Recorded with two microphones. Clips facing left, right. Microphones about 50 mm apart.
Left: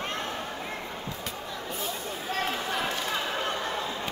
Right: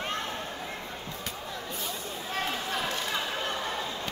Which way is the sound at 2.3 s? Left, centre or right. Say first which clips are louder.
Left 2 dB; centre.